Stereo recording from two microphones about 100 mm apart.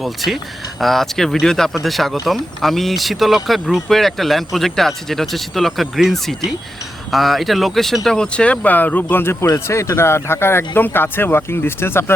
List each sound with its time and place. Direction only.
0.0 s speech: centre (ahead or behind); by 12.1 s 25° left (ahead or behind)